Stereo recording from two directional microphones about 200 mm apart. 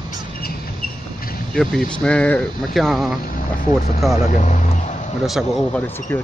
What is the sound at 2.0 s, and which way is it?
Speech, 5° left (ahead or behind).